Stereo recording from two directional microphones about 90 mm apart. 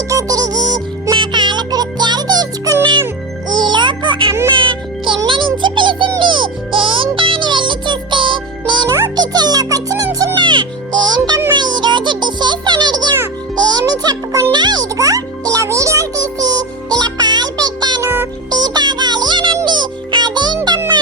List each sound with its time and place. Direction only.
0.1 s music: 40° right (ahead or behind)
3.5 s music: 60° right (ahead or behind)
9.1 s music: 50° right (ahead or behind)
10.3 s music: 60° right (ahead or behind)
18.0 s music: 25° right (ahead or behind)
18.5 s music: 50° right (ahead or behind)